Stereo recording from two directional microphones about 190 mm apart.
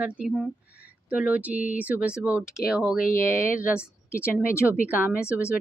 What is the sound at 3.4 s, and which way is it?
Speech, 45° left (ahead or behind).